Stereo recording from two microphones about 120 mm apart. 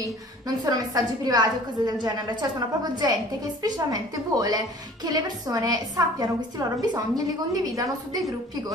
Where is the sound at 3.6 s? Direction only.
35° right (ahead or behind).